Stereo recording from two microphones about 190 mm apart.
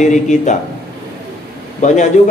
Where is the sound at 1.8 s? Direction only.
40° left (ahead or behind).